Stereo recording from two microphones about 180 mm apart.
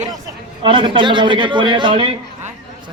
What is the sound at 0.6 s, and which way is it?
A man's voice, 25° right (ahead or behind).